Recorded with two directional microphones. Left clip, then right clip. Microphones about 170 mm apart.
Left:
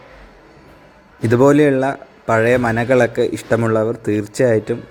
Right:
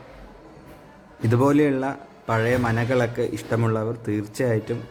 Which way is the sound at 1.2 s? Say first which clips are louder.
Left 8 dB; 25° left (ahead or behind).